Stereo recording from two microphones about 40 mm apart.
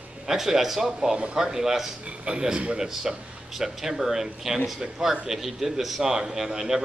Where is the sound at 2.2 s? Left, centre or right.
Right.